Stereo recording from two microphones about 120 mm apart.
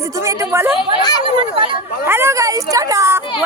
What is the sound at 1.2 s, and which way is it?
Speech, 45° right (ahead or behind).